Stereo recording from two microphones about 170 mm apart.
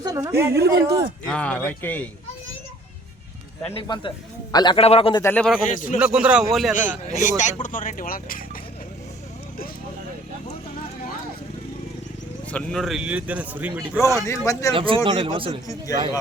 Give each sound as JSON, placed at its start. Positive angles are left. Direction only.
{"t": 0.0, "sound": "a woman's voice", "side_deg": -20}
{"t": 0.5, "sound": "speech", "side_deg": -70}
{"t": 1.3, "sound": "a man's voice", "side_deg": 5}
{"t": 3.7, "sound": "a man's voice", "side_deg": 30}
{"t": 5.2, "sound": "a man's voice", "side_deg": 10}
{"t": 5.7, "sound": "speech", "side_deg": 50}
{"t": 6.0, "sound": "a man's voice", "side_deg": -5}
{"t": 7.1, "sound": "speech", "side_deg": 45}
{"t": 12.5, "sound": "speech", "side_deg": 5}
{"t": 14.2, "sound": "a man's voice", "side_deg": 20}
{"t": 14.8, "sound": "speech", "side_deg": -30}
{"t": 15.6, "sound": "a man's voice", "side_deg": 20}